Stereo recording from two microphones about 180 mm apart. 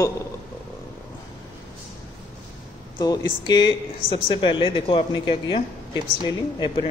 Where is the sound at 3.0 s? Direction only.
20° left (ahead or behind).